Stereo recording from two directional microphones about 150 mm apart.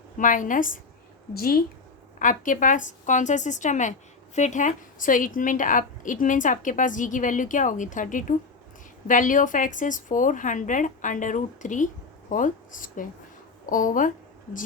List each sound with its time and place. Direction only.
0.2 s a woman's voice: 60° left (ahead or behind)
1.3 s a woman's voice: 90° left
2.1 s a woman's voice: 60° left (ahead or behind)